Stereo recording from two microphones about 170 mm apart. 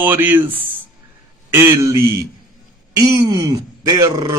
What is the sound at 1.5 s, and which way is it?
Speech, 15° right (ahead or behind).